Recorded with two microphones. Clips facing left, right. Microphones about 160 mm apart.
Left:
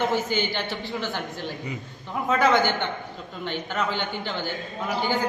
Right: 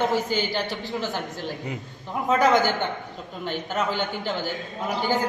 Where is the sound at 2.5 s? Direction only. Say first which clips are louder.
Right 1 dB; 40° right (ahead or behind).